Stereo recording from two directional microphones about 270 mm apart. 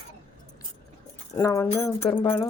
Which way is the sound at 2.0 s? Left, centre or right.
Centre.